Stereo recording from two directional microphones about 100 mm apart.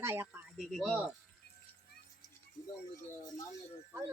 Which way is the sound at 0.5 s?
Centre (ahead or behind).